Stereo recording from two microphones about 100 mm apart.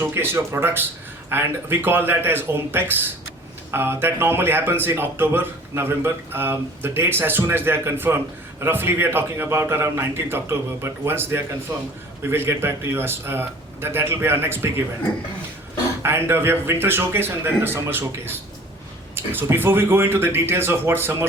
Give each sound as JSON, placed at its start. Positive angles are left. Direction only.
{"t": 0.0, "sound": "speech", "side_deg": -25}
{"t": 16.0, "sound": "speech", "side_deg": -25}